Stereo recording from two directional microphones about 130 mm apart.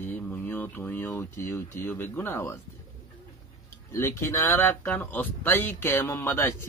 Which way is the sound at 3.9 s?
20° left (ahead or behind).